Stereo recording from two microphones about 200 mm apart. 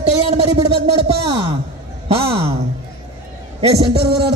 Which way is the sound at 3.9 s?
55° right (ahead or behind).